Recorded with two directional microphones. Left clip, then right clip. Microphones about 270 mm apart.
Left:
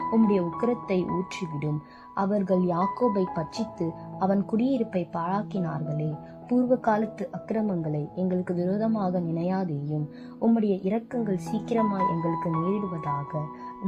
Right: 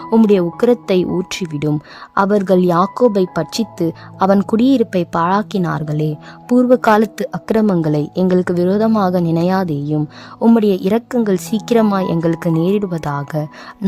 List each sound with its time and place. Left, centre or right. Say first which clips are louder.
0.1 s a woman's voice: right 14 dB; right